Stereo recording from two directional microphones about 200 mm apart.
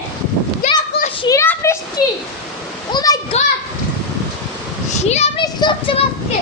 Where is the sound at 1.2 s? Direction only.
15° left (ahead or behind).